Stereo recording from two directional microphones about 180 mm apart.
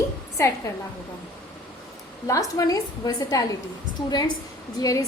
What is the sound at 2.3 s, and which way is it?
A woman's voice, 20° left (ahead or behind).